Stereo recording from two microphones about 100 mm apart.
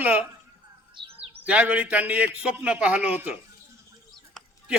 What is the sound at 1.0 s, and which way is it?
Speech, 55° right (ahead or behind).